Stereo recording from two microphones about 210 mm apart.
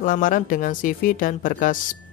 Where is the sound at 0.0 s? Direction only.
40° left (ahead or behind).